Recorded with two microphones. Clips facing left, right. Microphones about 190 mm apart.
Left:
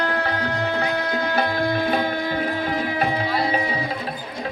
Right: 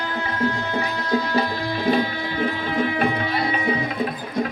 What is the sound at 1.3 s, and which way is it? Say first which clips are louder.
Music: left 2 dB; 55° left (ahead or behind).